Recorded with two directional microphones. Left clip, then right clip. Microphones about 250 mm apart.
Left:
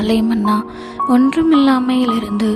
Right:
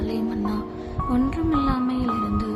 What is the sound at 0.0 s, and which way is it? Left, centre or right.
Music, left.